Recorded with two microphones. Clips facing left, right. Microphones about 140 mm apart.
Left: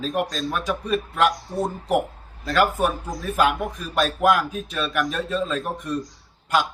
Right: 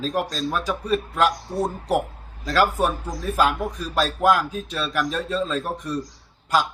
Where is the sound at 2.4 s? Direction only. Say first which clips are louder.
Even; 5° right (ahead or behind).